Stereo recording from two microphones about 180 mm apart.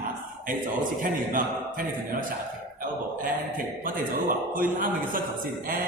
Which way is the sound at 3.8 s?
50° right (ahead or behind).